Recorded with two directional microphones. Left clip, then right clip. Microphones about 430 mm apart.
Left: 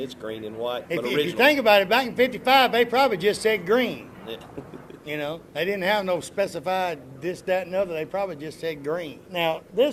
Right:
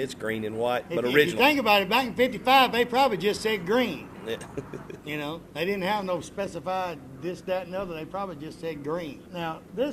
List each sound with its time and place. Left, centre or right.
0.4 s speech: right
0.9 s a man's voice: left
5.0 s a man's voice: centre
9.3 s a man's voice: left